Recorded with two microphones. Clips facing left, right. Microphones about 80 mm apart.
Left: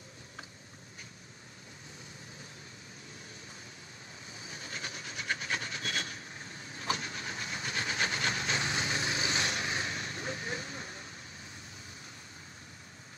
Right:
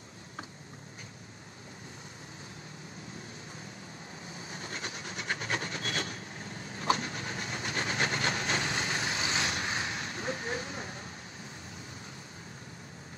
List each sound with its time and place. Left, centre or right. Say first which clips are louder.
4.5 s train: right 2 dB; right
6.8 s vehicle: right 5 dB; right